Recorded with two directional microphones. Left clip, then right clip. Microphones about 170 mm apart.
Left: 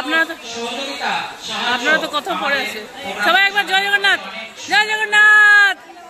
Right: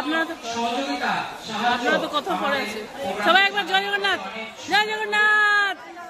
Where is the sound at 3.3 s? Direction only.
Centre (ahead or behind).